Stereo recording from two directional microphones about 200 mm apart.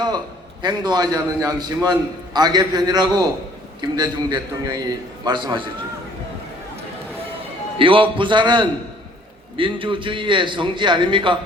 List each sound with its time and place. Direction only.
0.6 s a man's voice: 20° right (ahead or behind)
7.8 s a man's voice: 25° right (ahead or behind)